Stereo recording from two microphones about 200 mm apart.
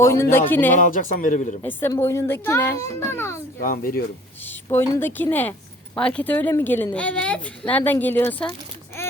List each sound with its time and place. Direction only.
0.0 s speech: 15° left (ahead or behind)
0.8 s a man's voice: 40° left (ahead or behind)
1.6 s speech: 10° left (ahead or behind)
3.6 s speech: 45° left (ahead or behind)
4.4 s a woman's voice: 10° left (ahead or behind)
9.0 s a sound: 10° left (ahead or behind)